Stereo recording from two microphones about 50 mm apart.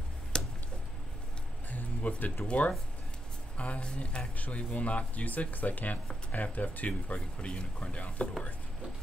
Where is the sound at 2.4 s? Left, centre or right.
Left.